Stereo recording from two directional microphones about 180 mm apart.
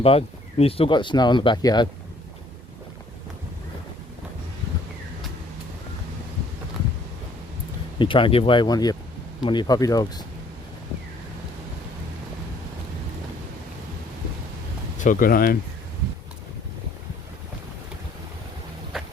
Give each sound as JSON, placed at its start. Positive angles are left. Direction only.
{"t": 0.0, "sound": "speech", "side_deg": 30}
{"t": 7.9, "sound": "speech", "side_deg": 30}
{"t": 14.9, "sound": "speech", "side_deg": 50}